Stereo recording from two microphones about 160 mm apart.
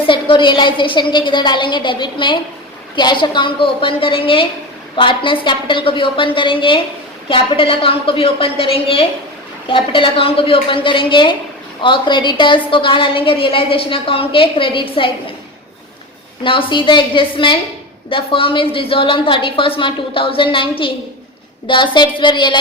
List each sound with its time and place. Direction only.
0.0 s a woman's voice: 30° left (ahead or behind)
16.4 s a woman's voice: 30° left (ahead or behind)